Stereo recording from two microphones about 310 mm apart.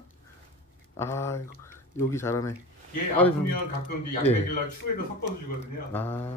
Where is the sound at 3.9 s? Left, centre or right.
Left.